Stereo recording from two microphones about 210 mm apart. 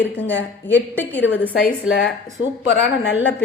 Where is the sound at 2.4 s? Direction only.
65° left (ahead or behind).